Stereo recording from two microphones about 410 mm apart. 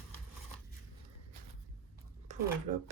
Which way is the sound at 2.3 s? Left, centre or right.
Centre.